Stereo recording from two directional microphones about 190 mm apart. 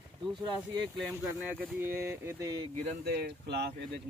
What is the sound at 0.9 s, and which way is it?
Speech, 10° right (ahead or behind).